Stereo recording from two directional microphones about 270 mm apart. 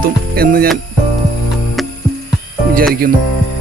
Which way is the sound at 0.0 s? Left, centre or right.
Right.